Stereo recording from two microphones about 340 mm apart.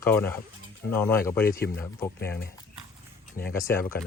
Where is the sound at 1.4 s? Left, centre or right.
Left.